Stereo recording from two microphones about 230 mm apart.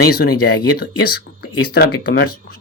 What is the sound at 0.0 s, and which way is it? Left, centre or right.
Speech, left.